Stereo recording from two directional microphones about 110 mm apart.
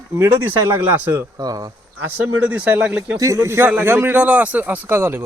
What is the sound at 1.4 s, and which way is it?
Speech, 35° right (ahead or behind).